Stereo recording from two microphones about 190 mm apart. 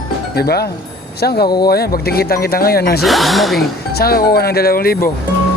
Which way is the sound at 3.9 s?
55° left (ahead or behind).